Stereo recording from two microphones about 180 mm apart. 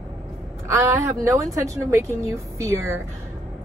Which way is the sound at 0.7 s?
15° right (ahead or behind).